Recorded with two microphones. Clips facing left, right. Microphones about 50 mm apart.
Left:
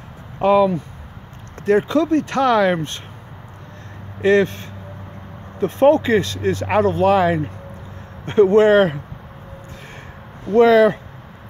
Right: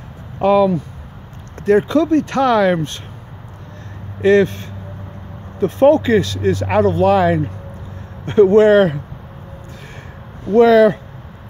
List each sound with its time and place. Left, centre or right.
0.4 s speech: centre
4.2 s speech: centre
10.5 s speech: centre